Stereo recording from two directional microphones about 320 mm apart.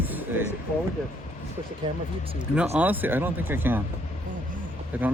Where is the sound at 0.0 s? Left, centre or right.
Centre.